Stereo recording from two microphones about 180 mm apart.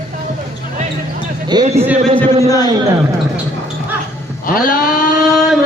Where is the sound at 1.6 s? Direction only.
35° right (ahead or behind).